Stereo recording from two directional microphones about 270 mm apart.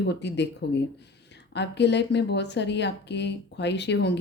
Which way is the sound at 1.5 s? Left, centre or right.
Left.